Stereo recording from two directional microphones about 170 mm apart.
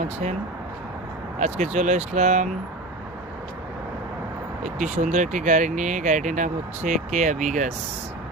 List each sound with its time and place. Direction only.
0.0 s speech: 40° right (ahead or behind)
1.4 s speech: 45° right (ahead or behind)
4.6 s speech: 45° right (ahead or behind)